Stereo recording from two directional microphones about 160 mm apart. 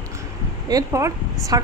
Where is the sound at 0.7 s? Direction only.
20° right (ahead or behind).